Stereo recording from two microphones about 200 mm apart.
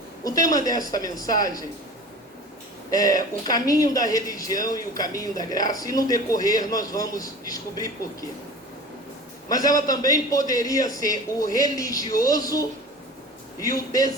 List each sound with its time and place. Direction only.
0.3 s speech: 15° left (ahead or behind)
2.9 s speech: 20° left (ahead or behind)
9.5 s speech: 20° left (ahead or behind)